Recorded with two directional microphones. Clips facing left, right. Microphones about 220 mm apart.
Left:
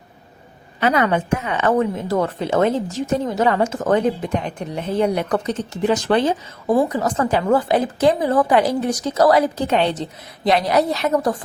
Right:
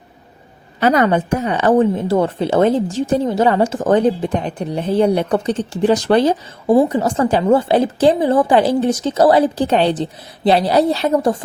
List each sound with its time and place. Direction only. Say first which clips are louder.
0.8 s speech: right 4 dB; 40° right (ahead or behind)